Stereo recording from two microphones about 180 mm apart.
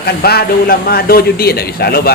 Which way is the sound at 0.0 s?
60° left (ahead or behind).